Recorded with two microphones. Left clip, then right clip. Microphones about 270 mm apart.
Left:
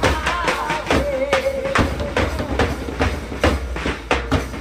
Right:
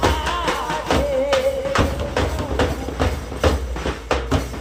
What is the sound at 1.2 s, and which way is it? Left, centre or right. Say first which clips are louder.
Music: even; centre.